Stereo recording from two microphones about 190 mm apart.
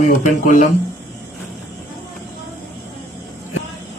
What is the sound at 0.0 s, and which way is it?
Speech, 40° left (ahead or behind).